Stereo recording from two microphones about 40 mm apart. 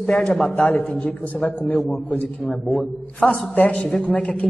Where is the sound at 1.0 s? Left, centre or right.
Left.